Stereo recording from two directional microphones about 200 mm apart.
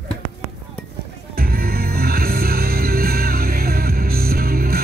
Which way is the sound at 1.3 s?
50° right (ahead or behind).